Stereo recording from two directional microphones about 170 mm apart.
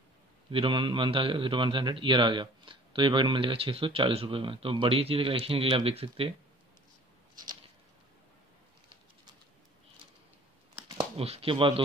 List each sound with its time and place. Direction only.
0.5 s a man's voice: 30° right (ahead or behind)
11.0 s speech: 35° right (ahead or behind)